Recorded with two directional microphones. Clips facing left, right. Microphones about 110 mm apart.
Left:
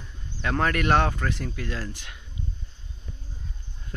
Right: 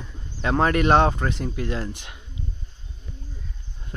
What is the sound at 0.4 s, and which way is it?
Speech, 25° right (ahead or behind).